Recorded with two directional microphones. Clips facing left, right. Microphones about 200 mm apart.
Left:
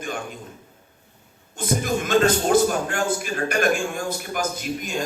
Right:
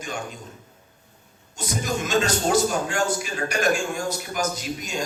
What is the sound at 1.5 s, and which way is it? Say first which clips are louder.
A man's voice: left 4 dB; 55° left (ahead or behind).